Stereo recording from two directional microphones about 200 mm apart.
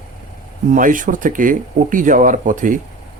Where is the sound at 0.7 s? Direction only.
40° right (ahead or behind).